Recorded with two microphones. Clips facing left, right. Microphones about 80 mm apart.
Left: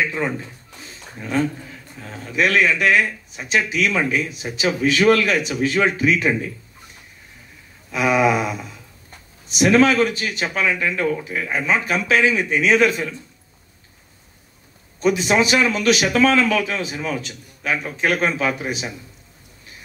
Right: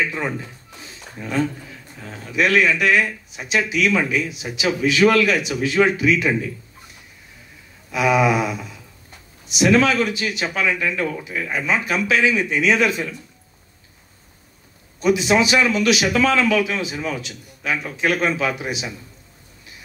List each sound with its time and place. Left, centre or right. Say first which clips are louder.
2.3 s a man's voice: even; left
7.9 s a man's voice: even; left
9.5 s a man's voice: left 1 dB; left
15.0 s a man's voice: right 1 dB; left